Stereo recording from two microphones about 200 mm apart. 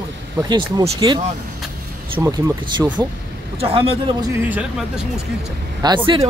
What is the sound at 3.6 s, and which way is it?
Speech, 30° right (ahead or behind).